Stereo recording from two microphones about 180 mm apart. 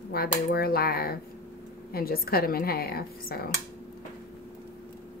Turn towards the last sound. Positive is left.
turn(degrees=55)  # may be behind; listen again after turning